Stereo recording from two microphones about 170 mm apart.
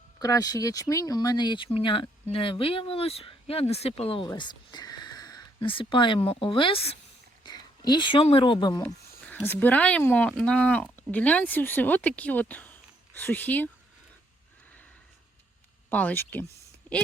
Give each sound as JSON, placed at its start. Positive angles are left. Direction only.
{"t": 0.2, "sound": "speech", "side_deg": 20}
{"t": 8.8, "sound": "speech", "side_deg": 10}
{"t": 15.9, "sound": "speech", "side_deg": 10}